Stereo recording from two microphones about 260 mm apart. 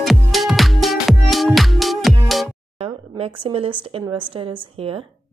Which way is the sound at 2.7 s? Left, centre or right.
Right.